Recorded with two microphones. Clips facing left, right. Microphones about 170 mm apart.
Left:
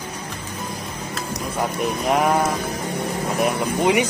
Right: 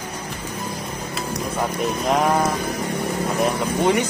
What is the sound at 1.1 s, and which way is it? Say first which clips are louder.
Speech: right 1 dB; centre (ahead or behind).